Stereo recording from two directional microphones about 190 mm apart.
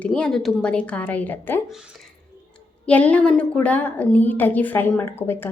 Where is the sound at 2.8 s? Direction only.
5° left (ahead or behind).